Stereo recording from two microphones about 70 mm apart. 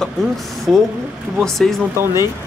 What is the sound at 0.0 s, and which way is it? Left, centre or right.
Speech, centre.